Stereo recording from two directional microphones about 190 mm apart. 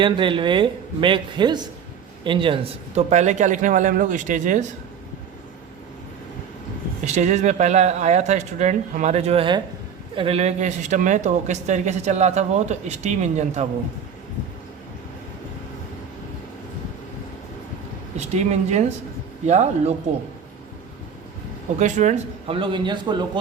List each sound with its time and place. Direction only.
0.0 s a man's voice: 25° right (ahead or behind)
7.0 s speech: 40° right (ahead or behind)
18.3 s speech: 35° right (ahead or behind)
21.8 s a man's voice: 40° right (ahead or behind); by 23.4 s 25° right (ahead or behind)